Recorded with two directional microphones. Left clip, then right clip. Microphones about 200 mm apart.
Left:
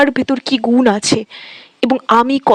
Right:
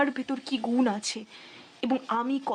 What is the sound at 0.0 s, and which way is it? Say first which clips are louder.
Speech: left 15 dB; 45° left (ahead or behind).